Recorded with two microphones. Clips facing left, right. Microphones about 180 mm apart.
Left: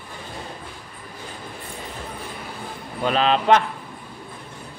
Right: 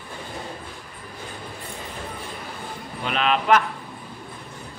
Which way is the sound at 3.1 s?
30° left (ahead or behind).